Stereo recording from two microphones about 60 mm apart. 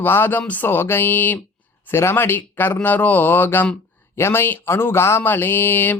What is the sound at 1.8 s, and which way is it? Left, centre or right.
Speech, left.